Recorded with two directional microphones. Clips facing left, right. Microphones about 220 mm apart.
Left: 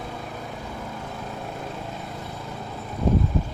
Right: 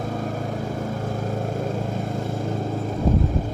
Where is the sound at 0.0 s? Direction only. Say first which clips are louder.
Right 8 dB; 45° right (ahead or behind).